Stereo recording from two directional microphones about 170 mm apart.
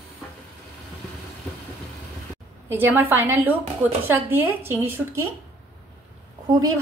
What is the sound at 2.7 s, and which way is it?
Speech, 10° right (ahead or behind).